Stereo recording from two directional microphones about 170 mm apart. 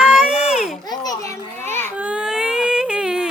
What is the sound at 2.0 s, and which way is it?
Baby cry, 5° right (ahead or behind).